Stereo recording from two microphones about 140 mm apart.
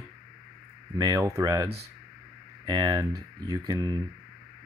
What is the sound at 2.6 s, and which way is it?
Speech, 30° right (ahead or behind).